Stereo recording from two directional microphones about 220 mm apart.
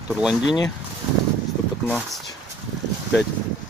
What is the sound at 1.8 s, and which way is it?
Speech, centre (ahead or behind).